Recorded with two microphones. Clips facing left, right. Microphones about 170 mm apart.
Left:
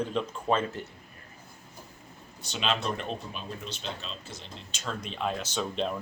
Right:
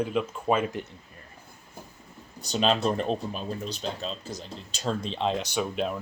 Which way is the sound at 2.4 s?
40° right (ahead or behind).